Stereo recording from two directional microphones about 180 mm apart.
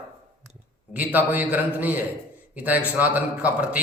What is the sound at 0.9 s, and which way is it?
A man's voice, 10° right (ahead or behind).